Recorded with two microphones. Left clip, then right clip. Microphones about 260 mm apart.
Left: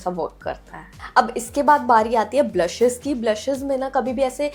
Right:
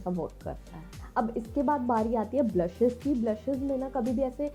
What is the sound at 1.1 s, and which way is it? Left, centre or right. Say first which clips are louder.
A woman's voice: left 11 dB; centre.